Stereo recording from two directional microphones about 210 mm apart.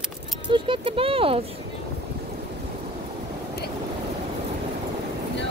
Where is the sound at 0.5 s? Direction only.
25° right (ahead or behind).